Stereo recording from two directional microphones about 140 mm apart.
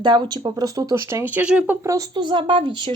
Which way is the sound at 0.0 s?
35° right (ahead or behind).